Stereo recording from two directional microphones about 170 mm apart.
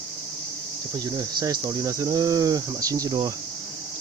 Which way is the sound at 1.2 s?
20° right (ahead or behind).